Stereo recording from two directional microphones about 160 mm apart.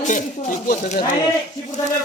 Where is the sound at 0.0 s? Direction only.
50° left (ahead or behind).